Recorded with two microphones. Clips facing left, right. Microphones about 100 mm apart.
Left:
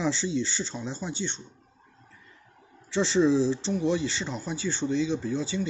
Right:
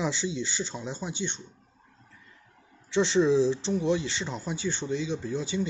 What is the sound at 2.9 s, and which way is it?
Speech, 15° right (ahead or behind).